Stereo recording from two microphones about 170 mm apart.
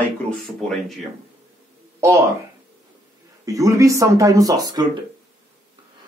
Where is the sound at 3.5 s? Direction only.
20° right (ahead or behind).